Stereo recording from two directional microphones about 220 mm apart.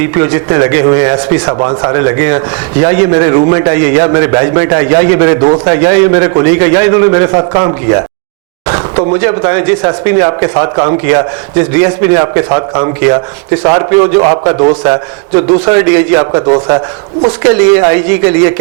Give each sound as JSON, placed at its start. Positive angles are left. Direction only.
{"t": 0.0, "sound": "a man's voice", "side_deg": -15}